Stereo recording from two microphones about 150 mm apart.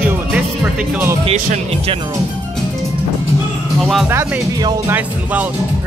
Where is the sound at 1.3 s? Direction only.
60° right (ahead or behind).